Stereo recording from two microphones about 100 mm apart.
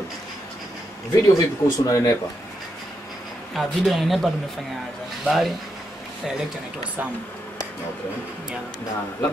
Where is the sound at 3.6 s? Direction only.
Centre (ahead or behind).